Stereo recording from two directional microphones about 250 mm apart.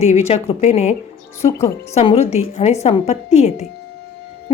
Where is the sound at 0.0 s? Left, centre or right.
Left.